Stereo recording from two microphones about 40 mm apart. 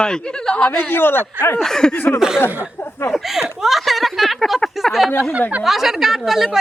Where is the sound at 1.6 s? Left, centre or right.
Centre.